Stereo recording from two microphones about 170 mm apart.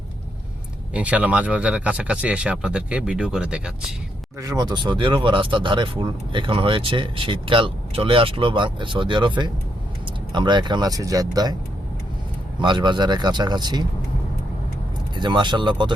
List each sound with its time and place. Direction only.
0.9 s speech: 10° right (ahead or behind)
4.4 s speech: 20° right (ahead or behind)
12.5 s speech: 25° right (ahead or behind)
15.1 s speech: 25° right (ahead or behind)